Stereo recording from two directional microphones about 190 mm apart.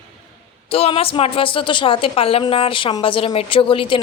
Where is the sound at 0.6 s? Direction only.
30° left (ahead or behind).